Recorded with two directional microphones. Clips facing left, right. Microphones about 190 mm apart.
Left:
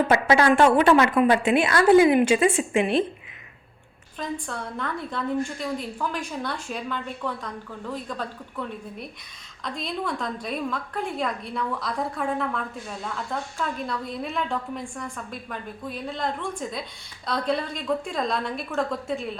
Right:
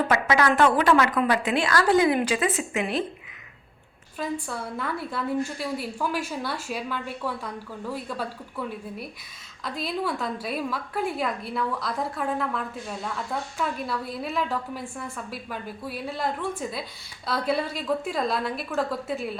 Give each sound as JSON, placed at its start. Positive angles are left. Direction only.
{"t": 0.1, "sound": "a woman's voice", "side_deg": 30}
{"t": 4.2, "sound": "a woman's voice", "side_deg": -5}